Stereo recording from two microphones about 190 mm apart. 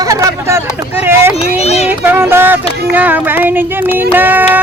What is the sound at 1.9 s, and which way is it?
Child singing, 10° right (ahead or behind).